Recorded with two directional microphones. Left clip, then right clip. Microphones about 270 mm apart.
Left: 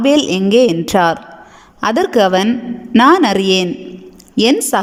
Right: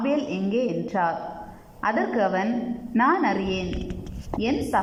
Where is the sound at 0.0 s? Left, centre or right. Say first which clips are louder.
Left 13 dB; left.